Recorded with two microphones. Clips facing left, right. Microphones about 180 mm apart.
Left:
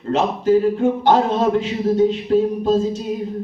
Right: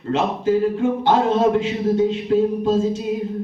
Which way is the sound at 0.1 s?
40° left (ahead or behind).